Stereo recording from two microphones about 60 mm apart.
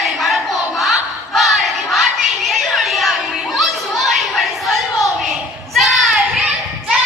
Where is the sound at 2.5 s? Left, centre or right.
Centre.